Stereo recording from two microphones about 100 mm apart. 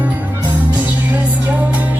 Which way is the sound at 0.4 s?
15° right (ahead or behind).